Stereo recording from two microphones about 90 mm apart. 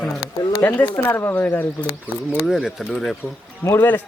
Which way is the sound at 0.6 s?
20° left (ahead or behind).